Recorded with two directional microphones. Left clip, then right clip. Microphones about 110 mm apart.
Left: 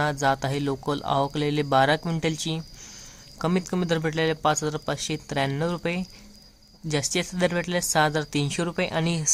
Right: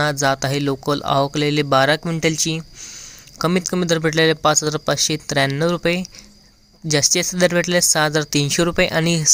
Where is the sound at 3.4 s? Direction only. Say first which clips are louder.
Right 7 dB; 30° right (ahead or behind).